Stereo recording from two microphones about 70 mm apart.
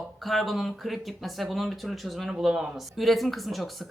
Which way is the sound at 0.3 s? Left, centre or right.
Centre.